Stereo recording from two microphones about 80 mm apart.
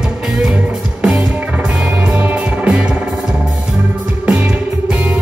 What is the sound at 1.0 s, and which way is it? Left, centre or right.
Music, centre.